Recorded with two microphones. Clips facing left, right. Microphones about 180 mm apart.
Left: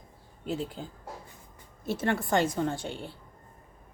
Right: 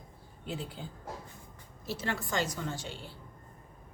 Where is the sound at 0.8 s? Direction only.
40° left (ahead or behind).